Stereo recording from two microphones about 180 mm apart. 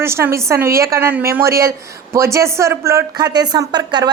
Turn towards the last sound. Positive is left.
turn(degrees=-25)  # may be behind; listen again after turning